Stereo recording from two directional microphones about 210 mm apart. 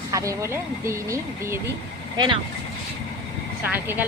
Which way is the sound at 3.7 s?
10° right (ahead or behind).